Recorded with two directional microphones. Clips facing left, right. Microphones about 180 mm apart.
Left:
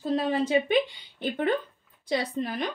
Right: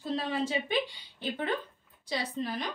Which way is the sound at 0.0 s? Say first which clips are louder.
Left 6 dB; 55° left (ahead or behind).